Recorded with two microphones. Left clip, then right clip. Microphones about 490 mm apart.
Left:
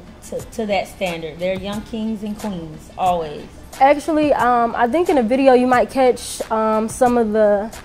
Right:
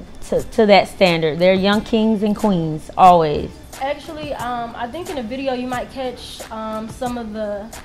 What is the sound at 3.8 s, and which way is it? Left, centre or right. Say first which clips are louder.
A woman's voice: left 11 dB; left.